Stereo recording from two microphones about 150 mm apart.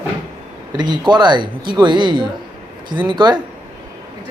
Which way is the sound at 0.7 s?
30° right (ahead or behind).